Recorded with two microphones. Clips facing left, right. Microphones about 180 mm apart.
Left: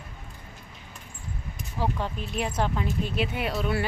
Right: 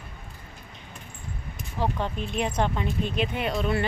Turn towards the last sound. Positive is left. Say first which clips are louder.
# right 1 dB
turn(degrees=5)  # may be behind; listen again after turning